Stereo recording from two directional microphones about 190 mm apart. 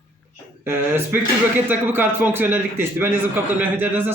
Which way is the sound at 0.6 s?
10° right (ahead or behind).